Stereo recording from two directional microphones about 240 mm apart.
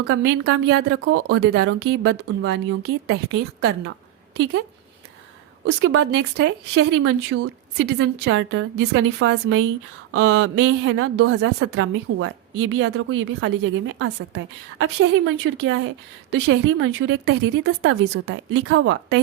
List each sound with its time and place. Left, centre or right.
0.0 s a woman's voice: right
3.6 s a woman's voice: right
5.6 s a woman's voice: right